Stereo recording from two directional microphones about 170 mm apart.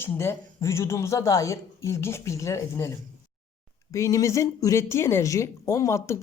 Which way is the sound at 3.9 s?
20° left (ahead or behind).